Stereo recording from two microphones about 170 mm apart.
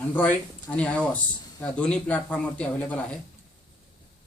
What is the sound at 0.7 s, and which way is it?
Speech, 5° left (ahead or behind).